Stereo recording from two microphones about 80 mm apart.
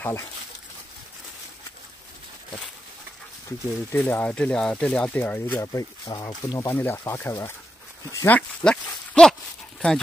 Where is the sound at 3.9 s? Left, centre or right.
Left.